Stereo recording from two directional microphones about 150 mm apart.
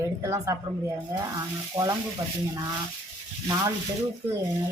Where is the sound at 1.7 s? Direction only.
20° right (ahead or behind).